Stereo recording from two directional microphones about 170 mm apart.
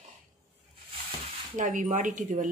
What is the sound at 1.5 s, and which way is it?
Speech, 50° right (ahead or behind).